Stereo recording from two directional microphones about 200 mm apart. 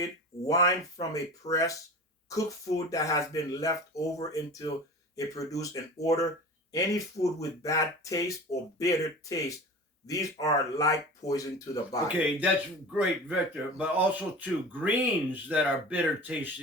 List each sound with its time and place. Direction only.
0.0 s speech: 15° left (ahead or behind)
12.9 s speech: 5° right (ahead or behind)